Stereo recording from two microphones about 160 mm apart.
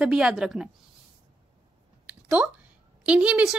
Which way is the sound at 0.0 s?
5° right (ahead or behind).